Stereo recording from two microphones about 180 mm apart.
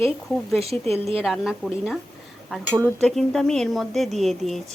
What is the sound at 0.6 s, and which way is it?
Speech, 35° right (ahead or behind).